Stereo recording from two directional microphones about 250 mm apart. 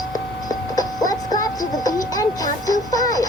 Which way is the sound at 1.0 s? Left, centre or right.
Centre.